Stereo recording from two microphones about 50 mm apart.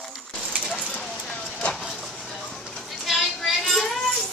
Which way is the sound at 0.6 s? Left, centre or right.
Centre.